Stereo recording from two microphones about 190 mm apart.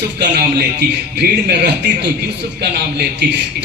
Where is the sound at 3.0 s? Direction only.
65° right (ahead or behind).